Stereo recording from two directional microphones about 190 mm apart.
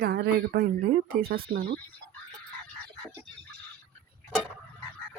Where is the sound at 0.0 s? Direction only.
60° right (ahead or behind).